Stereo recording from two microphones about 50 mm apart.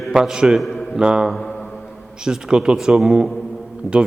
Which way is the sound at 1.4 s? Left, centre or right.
Centre.